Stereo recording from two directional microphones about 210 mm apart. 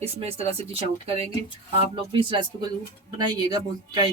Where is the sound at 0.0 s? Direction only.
30° right (ahead or behind).